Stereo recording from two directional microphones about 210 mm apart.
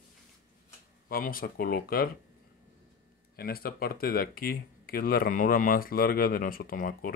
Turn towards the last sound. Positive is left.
turn(degrees=40)  # may be behind; listen again after turning